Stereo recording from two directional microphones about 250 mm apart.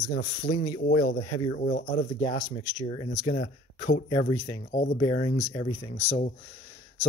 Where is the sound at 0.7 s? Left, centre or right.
Left.